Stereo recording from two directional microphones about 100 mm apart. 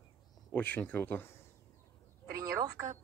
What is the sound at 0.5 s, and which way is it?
Speech, 15° left (ahead or behind).